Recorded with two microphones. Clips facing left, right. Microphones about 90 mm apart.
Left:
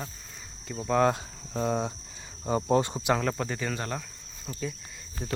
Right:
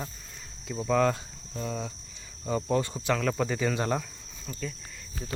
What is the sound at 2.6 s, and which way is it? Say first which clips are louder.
Speech: left 3 dB; 25° left (ahead or behind).